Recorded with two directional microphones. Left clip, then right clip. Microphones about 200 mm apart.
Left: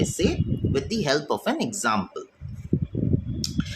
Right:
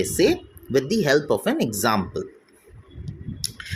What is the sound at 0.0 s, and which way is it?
Speech, 25° right (ahead or behind).